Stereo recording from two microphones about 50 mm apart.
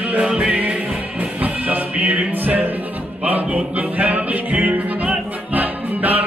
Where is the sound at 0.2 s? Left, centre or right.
Right.